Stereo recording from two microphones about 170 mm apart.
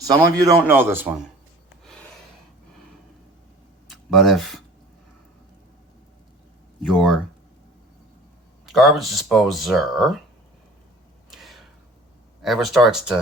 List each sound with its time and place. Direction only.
0.0 s speech: 20° right (ahead or behind)
3.8 s a sound: centre (ahead or behind)
6.8 s speech: centre (ahead or behind)
8.6 s speech: centre (ahead or behind)
11.3 s a sound: centre (ahead or behind)
12.4 s speech: centre (ahead or behind)